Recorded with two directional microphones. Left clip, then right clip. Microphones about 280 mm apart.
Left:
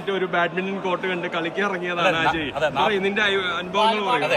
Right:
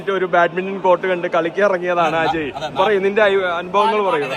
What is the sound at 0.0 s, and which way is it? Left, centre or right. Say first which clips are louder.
A man's voice: right 7 dB; centre.